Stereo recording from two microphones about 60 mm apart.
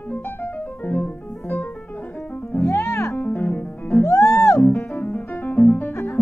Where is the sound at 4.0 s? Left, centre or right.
Left.